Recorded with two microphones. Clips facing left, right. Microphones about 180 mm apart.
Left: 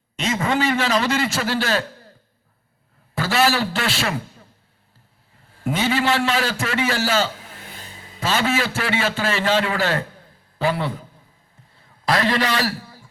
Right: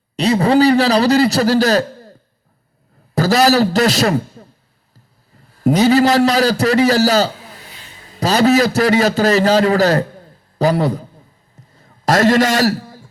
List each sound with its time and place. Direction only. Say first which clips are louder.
0.2 s a man's voice: right 9 dB; 35° right (ahead or behind)
3.2 s a man's voice: right 7 dB; 40° right (ahead or behind)
5.6 s a man's voice: right 9 dB; 40° right (ahead or behind)
11.7 s a sound: right 6 dB; 45° right (ahead or behind)